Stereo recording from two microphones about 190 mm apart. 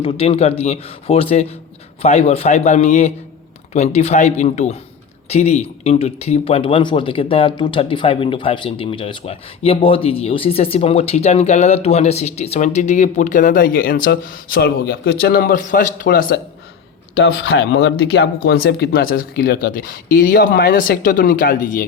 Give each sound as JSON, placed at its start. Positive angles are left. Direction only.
{"t": 0.0, "sound": "speech", "side_deg": 30}
{"t": 17.2, "sound": "speech", "side_deg": 85}